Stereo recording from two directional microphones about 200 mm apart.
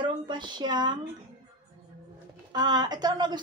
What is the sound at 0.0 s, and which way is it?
Speech, 20° right (ahead or behind).